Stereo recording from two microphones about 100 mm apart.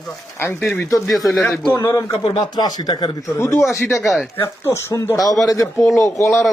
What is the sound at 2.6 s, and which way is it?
Speech, 40° left (ahead or behind).